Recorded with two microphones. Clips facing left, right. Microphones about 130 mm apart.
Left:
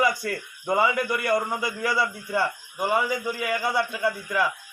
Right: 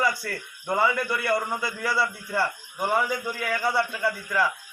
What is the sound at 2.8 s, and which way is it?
A man's voice, 5° left (ahead or behind).